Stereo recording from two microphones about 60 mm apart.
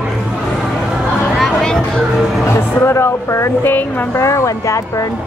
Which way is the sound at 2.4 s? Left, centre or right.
Left.